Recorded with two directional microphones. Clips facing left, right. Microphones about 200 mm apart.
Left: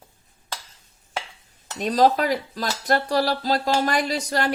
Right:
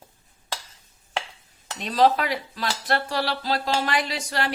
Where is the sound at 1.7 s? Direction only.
40° left (ahead or behind).